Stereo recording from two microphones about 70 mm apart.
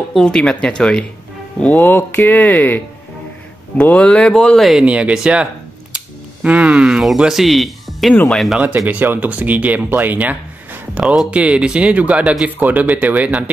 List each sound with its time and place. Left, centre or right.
0.2 s speech: centre
1.6 s speech: left
4.8 s speech: centre
5.9 s a sound: right
7.2 s speech: centre
8.7 s speech: right